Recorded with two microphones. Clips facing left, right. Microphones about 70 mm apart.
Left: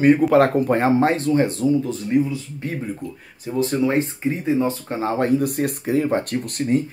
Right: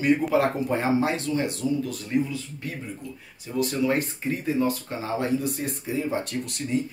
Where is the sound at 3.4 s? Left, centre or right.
Left.